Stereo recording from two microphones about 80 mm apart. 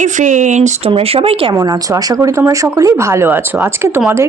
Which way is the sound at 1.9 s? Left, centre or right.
Right.